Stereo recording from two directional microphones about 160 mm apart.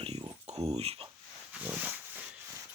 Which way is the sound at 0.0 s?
40° right (ahead or behind).